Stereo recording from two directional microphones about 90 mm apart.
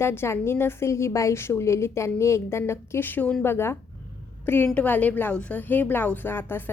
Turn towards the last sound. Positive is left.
turn(degrees=25)  # may be behind; listen again after turning